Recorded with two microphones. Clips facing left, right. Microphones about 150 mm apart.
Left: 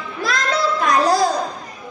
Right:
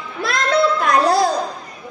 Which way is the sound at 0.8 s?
55° right (ahead or behind).